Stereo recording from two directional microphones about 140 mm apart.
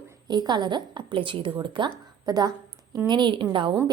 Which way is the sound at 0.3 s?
30° right (ahead or behind).